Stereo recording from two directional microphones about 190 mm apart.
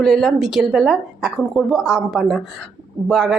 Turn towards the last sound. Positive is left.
turn(degrees=0)  # may be behind; listen again after turning